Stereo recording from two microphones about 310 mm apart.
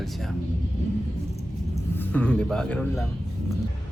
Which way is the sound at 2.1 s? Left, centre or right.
Centre.